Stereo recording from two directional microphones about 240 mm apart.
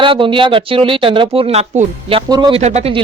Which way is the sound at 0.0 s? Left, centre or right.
Right.